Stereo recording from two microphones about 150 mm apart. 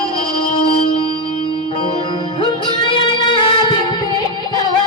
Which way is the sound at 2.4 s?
35° left (ahead or behind).